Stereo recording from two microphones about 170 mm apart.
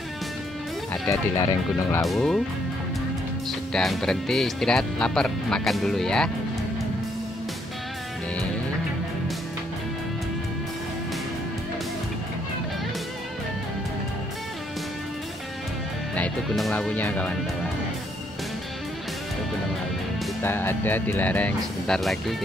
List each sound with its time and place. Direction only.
1.0 s speech: 15° left (ahead or behind)
2.0 s speech: centre (ahead or behind)
3.7 s speech: centre (ahead or behind)
16.2 s speech: 5° left (ahead or behind)
20.4 s speech: 15° left (ahead or behind)